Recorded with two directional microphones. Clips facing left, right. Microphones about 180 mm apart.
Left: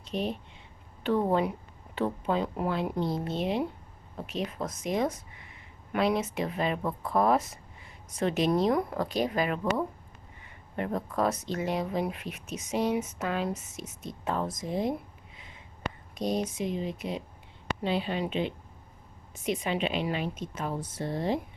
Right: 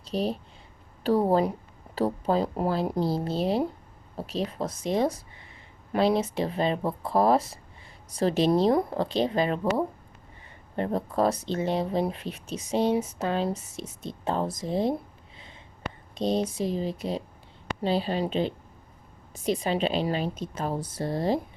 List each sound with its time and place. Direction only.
0.0 s speech: 35° right (ahead or behind)
16.1 s speech: 30° right (ahead or behind)